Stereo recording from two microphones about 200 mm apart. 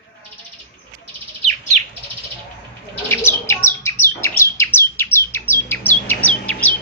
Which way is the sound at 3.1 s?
10° left (ahead or behind).